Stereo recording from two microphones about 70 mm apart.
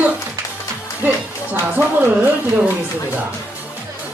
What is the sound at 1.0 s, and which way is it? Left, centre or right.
Music, right.